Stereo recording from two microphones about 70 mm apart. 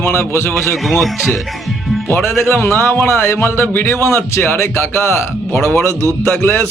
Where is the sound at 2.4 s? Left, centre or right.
Left.